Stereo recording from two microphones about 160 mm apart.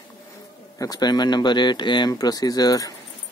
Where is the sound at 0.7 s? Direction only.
25° left (ahead or behind).